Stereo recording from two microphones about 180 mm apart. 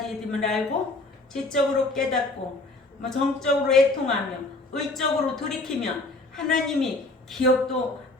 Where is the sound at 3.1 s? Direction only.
Centre (ahead or behind).